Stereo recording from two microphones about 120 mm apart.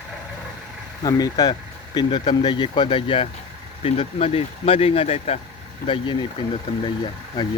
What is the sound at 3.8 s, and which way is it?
Speech, 55° left (ahead or behind).